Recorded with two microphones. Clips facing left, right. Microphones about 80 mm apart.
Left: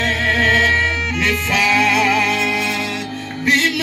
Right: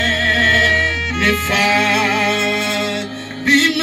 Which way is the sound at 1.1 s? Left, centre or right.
Right.